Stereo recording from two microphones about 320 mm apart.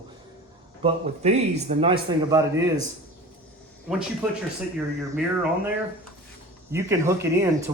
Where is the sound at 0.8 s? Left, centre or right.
Centre.